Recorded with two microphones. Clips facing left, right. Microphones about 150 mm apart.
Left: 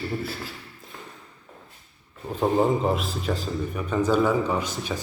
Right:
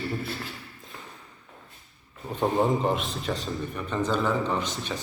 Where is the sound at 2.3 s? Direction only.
Centre (ahead or behind).